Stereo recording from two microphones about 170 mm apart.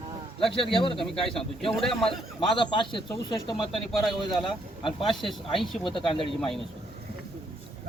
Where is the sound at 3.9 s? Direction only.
Centre (ahead or behind).